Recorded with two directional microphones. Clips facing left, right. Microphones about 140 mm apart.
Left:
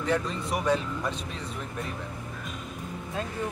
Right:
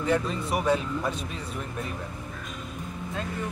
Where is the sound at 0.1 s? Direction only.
5° right (ahead or behind).